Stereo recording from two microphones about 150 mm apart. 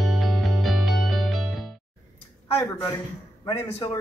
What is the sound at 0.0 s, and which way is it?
Music, centre (ahead or behind).